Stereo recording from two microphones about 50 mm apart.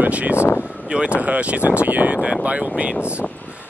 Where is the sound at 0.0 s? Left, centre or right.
Right.